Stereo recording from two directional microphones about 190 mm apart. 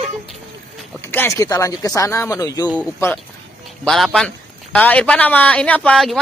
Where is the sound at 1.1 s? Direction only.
15° left (ahead or behind).